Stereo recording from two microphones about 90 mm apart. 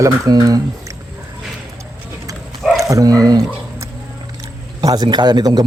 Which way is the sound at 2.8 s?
40° right (ahead or behind).